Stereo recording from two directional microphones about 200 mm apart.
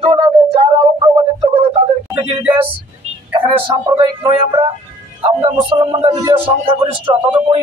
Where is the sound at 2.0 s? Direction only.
10° right (ahead or behind).